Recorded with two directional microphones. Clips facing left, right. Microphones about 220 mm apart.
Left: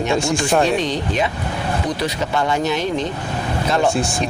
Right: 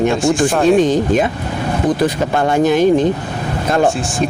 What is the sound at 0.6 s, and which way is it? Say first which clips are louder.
Speech: right 8 dB; 50° right (ahead or behind).